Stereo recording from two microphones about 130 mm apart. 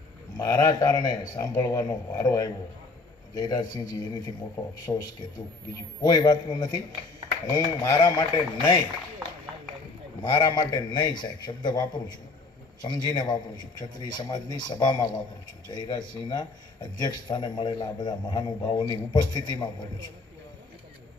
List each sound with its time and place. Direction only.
0.3 s speech: 30° left (ahead or behind)
10.2 s speech: 35° left (ahead or behind)